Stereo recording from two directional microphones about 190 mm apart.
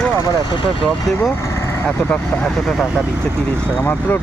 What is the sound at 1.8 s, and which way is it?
Speech, 5° left (ahead or behind).